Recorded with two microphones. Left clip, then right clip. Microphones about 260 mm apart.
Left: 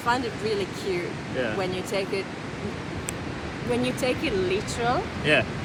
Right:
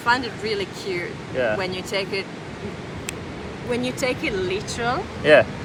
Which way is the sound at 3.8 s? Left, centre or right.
Centre.